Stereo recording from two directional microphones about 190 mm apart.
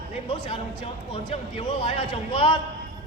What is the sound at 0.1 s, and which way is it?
Speech, 25° left (ahead or behind).